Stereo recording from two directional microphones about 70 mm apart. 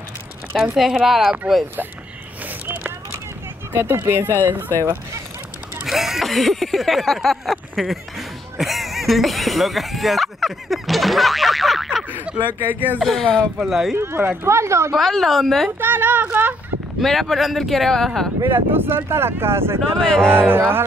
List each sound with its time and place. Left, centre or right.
0.6 s speech: centre
2.6 s a sound: right
3.7 s speech: right
5.9 s speech: centre
12.7 s speech: left
13.0 s speech: centre
13.6 s speech: centre
13.9 s speech: right
15.0 s speech: centre
15.8 s speech: right
17.0 s speech: centre
18.5 s speech: right
19.8 s speech: centre
20.3 s speech: right